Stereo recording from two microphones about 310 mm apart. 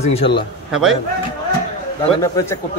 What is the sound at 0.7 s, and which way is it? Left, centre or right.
Speech, centre.